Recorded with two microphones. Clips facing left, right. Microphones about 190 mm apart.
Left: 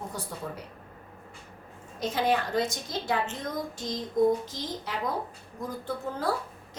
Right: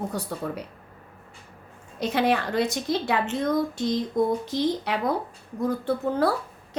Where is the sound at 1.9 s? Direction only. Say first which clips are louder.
Right 3 dB; 65° right (ahead or behind).